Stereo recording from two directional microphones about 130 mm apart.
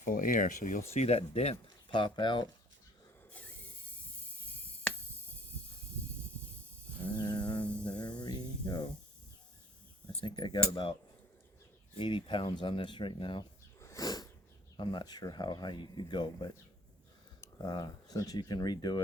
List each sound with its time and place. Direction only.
0.0 s speech: 90° left
1.0 s speech: 50° left (ahead or behind); by 2.5 s 35° left (ahead or behind)
3.3 s rub: 10° left (ahead or behind)
7.2 s a sound: 35° left (ahead or behind)
10.2 s speech: 35° left (ahead or behind)
11.9 s speech: 40° left (ahead or behind)
13.7 s sniff: 25° left (ahead or behind)
14.8 s speech: 35° left (ahead or behind)
17.6 s speech: 30° left (ahead or behind)